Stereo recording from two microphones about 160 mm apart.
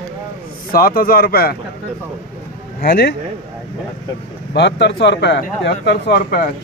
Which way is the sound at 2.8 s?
75° left (ahead or behind).